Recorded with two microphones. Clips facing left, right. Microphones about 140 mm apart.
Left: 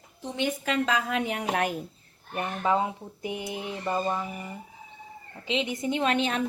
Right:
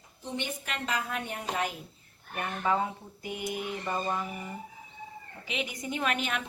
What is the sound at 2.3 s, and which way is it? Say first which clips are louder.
Speech: left 3 dB; 20° left (ahead or behind).